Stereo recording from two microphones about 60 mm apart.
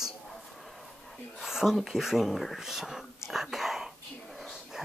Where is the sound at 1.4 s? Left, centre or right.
Centre.